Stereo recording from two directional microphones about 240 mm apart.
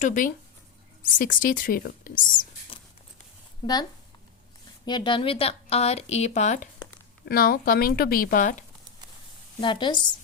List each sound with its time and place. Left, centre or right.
0.0 s speech: left
3.6 s speech: centre
4.9 s speech: centre
9.6 s speech: centre